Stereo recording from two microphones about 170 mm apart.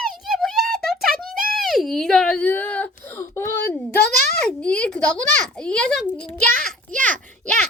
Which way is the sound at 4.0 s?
65° left (ahead or behind).